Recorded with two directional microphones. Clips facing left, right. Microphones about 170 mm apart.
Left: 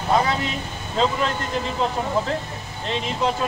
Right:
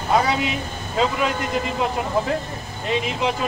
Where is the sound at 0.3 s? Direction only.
10° right (ahead or behind).